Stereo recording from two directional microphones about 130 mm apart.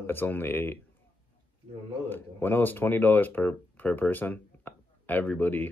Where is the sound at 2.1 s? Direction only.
15° left (ahead or behind).